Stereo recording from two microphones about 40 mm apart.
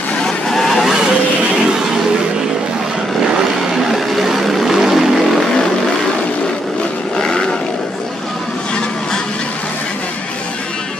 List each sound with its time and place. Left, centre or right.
0.5 s vehicle: centre
3.7 s vehicle: centre
7.2 s vehicle: centre